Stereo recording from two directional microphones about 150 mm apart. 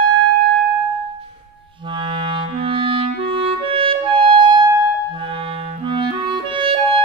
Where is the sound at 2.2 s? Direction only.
35° right (ahead or behind).